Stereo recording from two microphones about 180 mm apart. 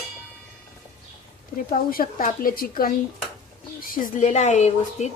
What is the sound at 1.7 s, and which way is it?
A woman's voice, 55° left (ahead or behind).